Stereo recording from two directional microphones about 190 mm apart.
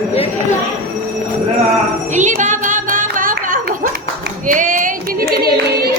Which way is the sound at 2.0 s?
40° right (ahead or behind).